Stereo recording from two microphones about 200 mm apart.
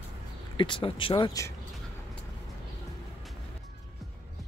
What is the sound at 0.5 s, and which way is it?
Speech, 25° left (ahead or behind).